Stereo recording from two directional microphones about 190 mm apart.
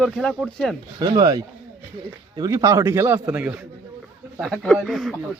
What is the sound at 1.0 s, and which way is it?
A man's voice, 20° right (ahead or behind).